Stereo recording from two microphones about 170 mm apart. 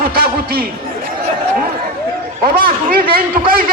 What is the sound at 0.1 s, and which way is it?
Chatter, 60° right (ahead or behind).